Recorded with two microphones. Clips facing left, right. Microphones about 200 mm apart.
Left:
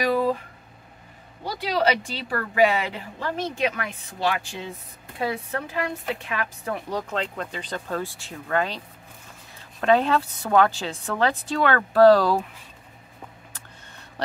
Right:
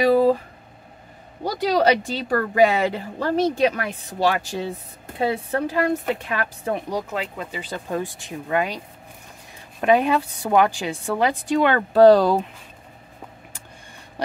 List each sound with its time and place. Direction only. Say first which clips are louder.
0.0 s a sound: right 6 dB; 30° right (ahead or behind)
1.4 s speech: right 5 dB; 45° right (ahead or behind)
6.9 s a woman's voice: right 1 dB; 10° right (ahead or behind)